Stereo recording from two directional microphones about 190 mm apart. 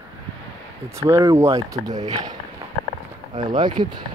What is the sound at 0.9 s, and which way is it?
Speech, 15° right (ahead or behind).